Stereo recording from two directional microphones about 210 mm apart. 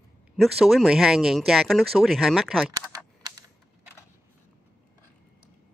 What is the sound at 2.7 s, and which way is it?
Typing, 20° right (ahead or behind).